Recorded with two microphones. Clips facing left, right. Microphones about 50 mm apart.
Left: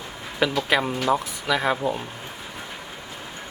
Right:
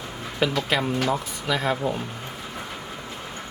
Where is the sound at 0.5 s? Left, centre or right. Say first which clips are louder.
Left 1 dB; centre.